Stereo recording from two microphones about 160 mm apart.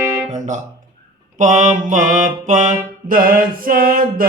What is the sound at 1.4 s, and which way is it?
Mantra, 50° right (ahead or behind).